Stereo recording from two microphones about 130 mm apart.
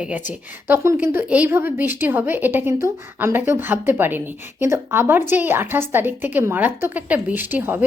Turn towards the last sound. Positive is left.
turn(degrees=-15)  # may be behind; listen again after turning